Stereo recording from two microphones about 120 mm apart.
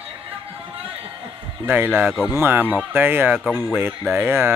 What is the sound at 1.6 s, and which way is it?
Speech, 15° right (ahead or behind).